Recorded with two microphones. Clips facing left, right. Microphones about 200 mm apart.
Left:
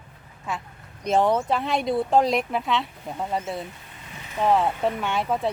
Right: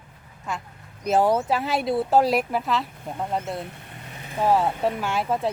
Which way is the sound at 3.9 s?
50° right (ahead or behind).